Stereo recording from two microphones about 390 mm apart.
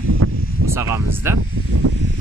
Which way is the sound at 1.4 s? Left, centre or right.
Right.